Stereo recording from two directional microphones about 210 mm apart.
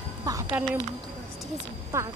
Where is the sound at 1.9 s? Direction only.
10° right (ahead or behind).